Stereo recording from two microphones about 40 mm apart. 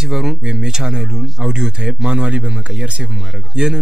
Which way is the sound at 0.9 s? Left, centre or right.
Centre.